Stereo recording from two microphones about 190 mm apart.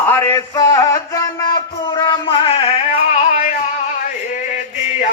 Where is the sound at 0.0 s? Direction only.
10° left (ahead or behind); by 3.5 s 35° left (ahead or behind).